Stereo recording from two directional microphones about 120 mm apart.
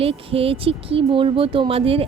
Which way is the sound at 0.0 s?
50° right (ahead or behind).